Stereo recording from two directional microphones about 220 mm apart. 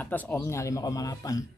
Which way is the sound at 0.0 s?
10° left (ahead or behind).